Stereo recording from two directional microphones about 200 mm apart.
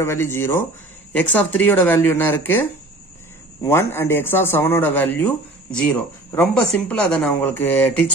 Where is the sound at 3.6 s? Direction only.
10° left (ahead or behind).